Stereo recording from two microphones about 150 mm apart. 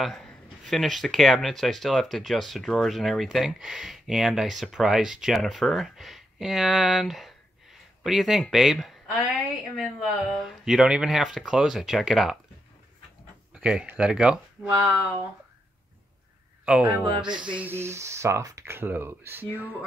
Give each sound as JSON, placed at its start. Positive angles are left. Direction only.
{"t": 0.0, "sound": "speech", "side_deg": 5}
{"t": 13.5, "sound": "speech", "side_deg": -5}
{"t": 16.6, "sound": "speech", "side_deg": -10}